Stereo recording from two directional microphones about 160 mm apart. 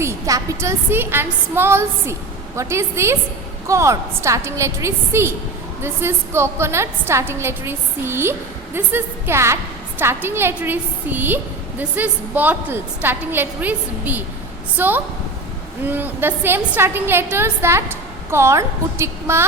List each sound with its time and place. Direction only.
0.0 s a woman's voice: 20° right (ahead or behind)